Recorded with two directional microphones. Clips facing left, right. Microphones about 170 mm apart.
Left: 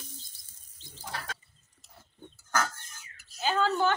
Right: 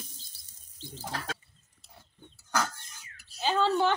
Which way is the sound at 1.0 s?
70° right (ahead or behind).